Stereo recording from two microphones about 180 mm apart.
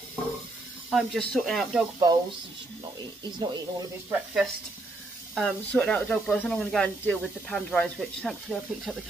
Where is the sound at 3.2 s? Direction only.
20° right (ahead or behind).